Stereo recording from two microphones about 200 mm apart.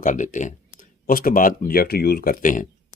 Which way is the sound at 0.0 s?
40° left (ahead or behind).